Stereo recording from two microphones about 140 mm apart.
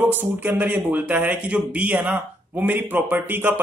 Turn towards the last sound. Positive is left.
turn(degrees=-15)  # may be behind; listen again after turning